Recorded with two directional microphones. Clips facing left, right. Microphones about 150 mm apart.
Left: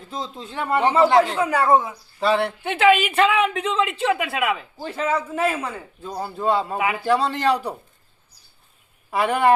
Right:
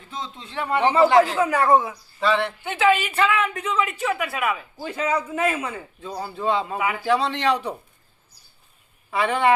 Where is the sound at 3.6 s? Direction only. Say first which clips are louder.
Left 2 dB; 75° left (ahead or behind).